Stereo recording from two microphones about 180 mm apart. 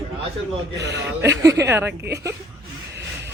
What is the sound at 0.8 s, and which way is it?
Speech, 75° right (ahead or behind).